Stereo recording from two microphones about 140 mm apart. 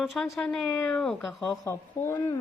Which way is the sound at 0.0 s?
5° left (ahead or behind).